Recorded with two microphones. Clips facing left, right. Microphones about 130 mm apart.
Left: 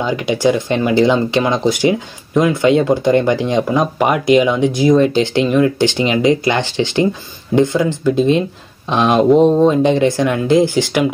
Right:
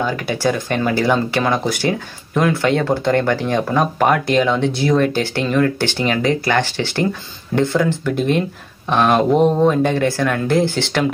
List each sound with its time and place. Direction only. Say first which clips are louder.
0.0 s speech: left 4 dB; 15° left (ahead or behind)